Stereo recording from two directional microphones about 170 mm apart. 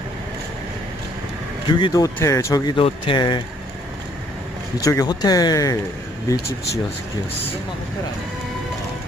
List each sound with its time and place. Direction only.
1.7 s speech: 25° left (ahead or behind)
4.7 s speech: 20° left (ahead or behind)